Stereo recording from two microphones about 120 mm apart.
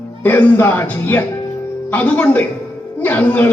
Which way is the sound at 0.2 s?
15° left (ahead or behind).